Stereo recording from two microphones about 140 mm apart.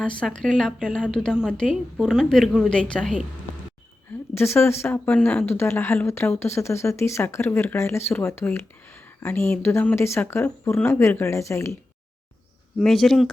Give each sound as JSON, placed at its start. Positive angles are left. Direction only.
{"t": 0.0, "sound": "a woman's voice", "side_deg": 5}
{"t": 4.4, "sound": "speech", "side_deg": 15}
{"t": 12.8, "sound": "a woman's voice", "side_deg": 0}